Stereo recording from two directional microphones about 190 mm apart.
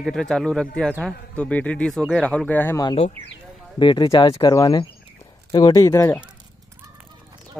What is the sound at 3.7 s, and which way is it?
Speech, 25° left (ahead or behind).